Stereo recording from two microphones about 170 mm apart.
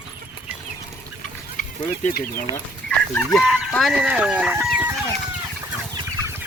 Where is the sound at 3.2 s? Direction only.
Centre (ahead or behind).